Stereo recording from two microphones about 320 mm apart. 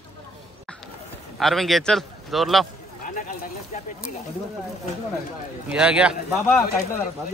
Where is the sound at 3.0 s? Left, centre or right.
Left.